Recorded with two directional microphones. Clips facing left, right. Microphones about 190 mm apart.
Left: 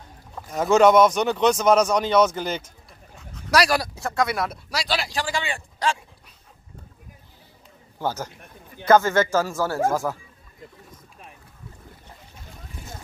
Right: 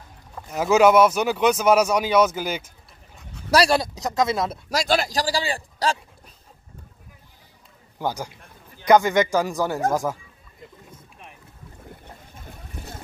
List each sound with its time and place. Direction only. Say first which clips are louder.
0.4 s speech: even; 5° right (ahead or behind)
3.4 s speech: right 2 dB; 30° right (ahead or behind)
4.6 s speech: right 5 dB; 45° right (ahead or behind)
8.0 s speech: even; 15° right (ahead or behind)